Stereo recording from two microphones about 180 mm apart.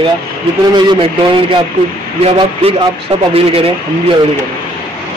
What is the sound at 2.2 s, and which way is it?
Speech, 35° right (ahead or behind).